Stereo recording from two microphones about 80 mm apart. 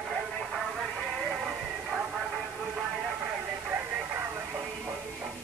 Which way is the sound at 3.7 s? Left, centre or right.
Right.